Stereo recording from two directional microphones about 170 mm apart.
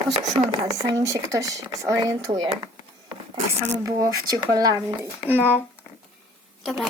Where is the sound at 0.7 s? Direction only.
20° right (ahead or behind).